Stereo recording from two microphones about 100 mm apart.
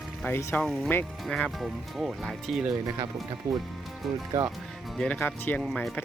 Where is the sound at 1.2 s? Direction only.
Centre (ahead or behind).